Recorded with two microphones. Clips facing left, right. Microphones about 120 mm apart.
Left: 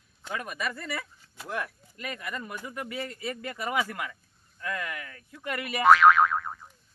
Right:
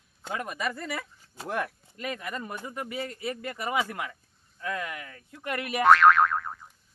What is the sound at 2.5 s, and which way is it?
A man's voice, 25° right (ahead or behind).